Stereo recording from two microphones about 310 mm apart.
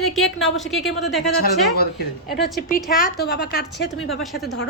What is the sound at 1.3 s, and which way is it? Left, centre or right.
Speech, left.